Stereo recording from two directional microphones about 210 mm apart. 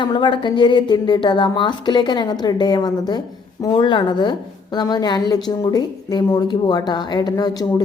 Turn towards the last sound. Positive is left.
turn(degrees=20)  # may be behind; listen again after turning